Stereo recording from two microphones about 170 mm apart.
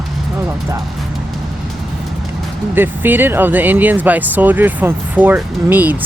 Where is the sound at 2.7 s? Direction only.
10° right (ahead or behind).